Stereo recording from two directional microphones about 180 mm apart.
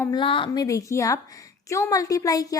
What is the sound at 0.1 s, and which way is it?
A woman's voice, 30° left (ahead or behind).